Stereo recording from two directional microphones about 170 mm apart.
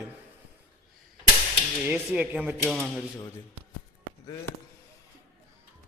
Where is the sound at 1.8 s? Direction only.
10° right (ahead or behind).